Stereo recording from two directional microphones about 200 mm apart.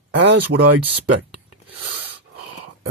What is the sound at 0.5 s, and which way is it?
Speech, 70° right (ahead or behind).